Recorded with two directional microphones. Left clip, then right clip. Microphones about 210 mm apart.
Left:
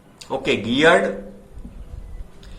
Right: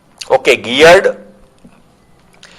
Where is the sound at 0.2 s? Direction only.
45° right (ahead or behind).